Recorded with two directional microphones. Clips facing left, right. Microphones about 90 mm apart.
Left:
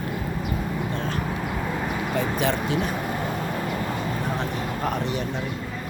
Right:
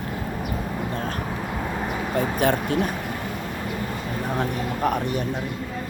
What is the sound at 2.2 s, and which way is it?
Speech, 45° right (ahead or behind).